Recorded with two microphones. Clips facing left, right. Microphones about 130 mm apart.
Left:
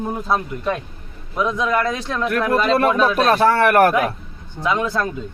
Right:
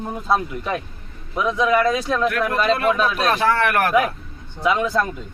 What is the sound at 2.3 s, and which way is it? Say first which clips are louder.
Speech: left 2 dB; 40° left (ahead or behind).